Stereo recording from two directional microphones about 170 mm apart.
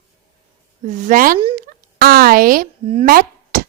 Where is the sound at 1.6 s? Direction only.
55° right (ahead or behind).